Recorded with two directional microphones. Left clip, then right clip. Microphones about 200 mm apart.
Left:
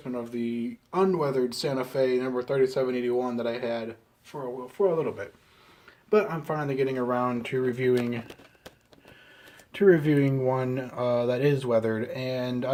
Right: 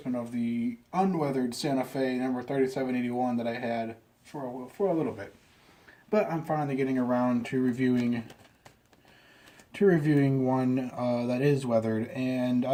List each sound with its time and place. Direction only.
0.3 s speech: 40° left (ahead or behind)
6.1 s speech: 45° left (ahead or behind)
7.1 s speech: 30° left (ahead or behind)
9.7 s speech: 25° left (ahead or behind)